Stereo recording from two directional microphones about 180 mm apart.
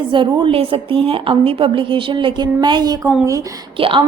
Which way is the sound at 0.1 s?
30° right (ahead or behind).